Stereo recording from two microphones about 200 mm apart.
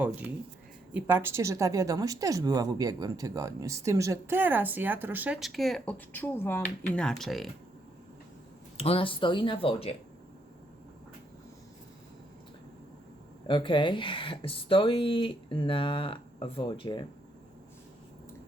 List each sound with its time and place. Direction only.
0.0 s speech: 5° right (ahead or behind)
8.8 s speech: 30° left (ahead or behind)
13.5 s speech: 25° left (ahead or behind)